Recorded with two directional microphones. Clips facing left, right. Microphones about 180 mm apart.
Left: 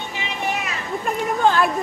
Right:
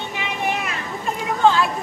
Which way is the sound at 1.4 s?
55° left (ahead or behind).